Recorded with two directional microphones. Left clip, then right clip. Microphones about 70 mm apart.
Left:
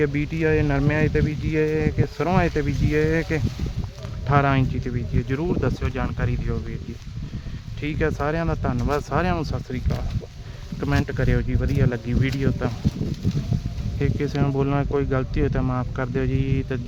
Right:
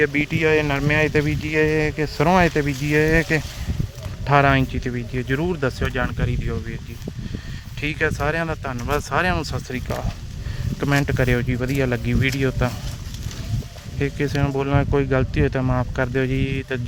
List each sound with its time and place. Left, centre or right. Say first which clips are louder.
0.1 s speech: right 4 dB; right
2.2 s speech: right 5 dB; right
4.3 s speech: right 4 dB; right
7.8 s speech: right 2 dB; right
8.7 s speech: right 3 dB; right
9.4 s speech: right 2 dB; right
10.8 s speech: right 4 dB; right
14.0 s speech: right 2 dB; centre